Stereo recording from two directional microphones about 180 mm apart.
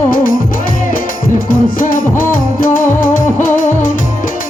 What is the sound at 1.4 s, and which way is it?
Music, 50° left (ahead or behind).